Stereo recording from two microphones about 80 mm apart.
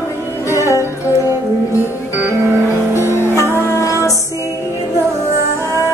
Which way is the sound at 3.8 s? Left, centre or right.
Left.